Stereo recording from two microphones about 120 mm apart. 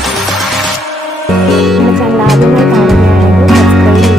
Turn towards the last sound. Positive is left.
turn(degrees=0)  # may be behind; listen again after turning